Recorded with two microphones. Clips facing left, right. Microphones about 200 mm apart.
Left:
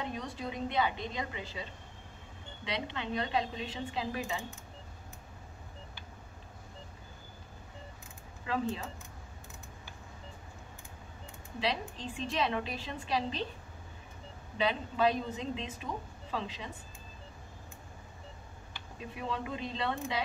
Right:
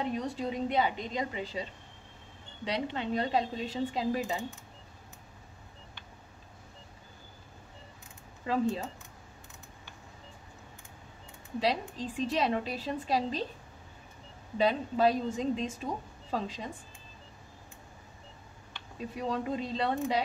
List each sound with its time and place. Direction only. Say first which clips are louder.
0.0 s a woman's voice: right 5 dB; 35° right (ahead or behind)
8.5 s a woman's voice: right 4 dB; 40° right (ahead or behind)
11.6 s a woman's voice: right 3 dB; 40° right (ahead or behind)
14.6 s a woman's voice: right 3 dB; 40° right (ahead or behind)
19.1 s a woman's voice: right 5 dB; 40° right (ahead or behind)